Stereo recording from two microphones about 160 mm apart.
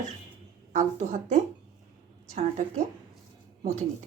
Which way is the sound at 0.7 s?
50° right (ahead or behind).